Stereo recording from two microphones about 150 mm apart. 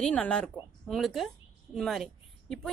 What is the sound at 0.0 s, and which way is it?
A woman's voice, 5° left (ahead or behind).